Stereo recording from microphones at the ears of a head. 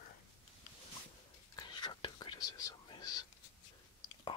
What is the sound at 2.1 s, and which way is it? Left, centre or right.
Whispering, left.